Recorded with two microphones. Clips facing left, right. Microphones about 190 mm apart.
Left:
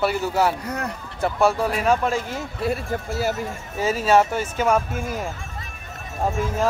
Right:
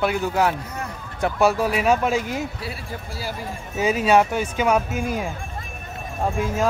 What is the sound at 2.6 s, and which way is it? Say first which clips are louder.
Speech: left 8 dB; 50° left (ahead or behind).